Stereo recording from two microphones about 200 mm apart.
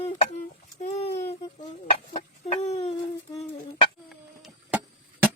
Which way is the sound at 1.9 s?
30° left (ahead or behind).